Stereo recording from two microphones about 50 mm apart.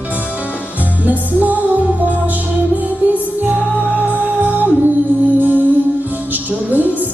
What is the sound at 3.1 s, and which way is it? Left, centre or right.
Music, right.